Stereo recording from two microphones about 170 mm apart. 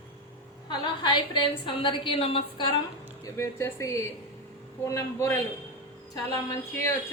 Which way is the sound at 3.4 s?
15° left (ahead or behind).